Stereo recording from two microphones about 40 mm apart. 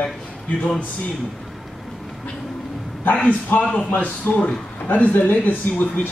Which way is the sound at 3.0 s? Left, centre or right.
Left.